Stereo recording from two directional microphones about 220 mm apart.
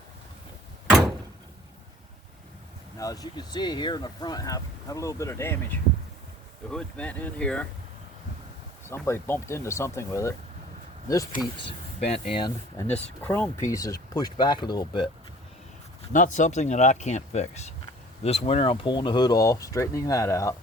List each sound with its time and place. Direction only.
0.9 s door: 5° right (ahead or behind)
3.0 s speech: 15° left (ahead or behind)
9.0 s speech: 10° left (ahead or behind)
11.3 s speech: 25° left (ahead or behind)
13.2 s speech: 10° left (ahead or behind)
16.1 s speech: 35° left (ahead or behind); by 20.6 s 15° left (ahead or behind)